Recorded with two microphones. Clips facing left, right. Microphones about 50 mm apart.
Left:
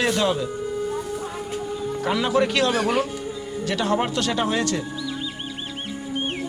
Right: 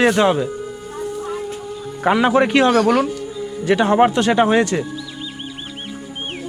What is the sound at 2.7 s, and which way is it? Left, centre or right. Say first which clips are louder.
Speech: right 7 dB; centre.